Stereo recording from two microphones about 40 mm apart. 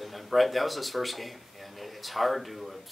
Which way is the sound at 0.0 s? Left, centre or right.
Centre.